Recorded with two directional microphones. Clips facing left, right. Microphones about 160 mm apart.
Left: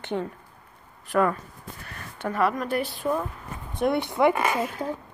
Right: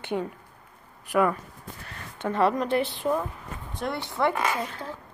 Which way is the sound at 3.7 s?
20° left (ahead or behind).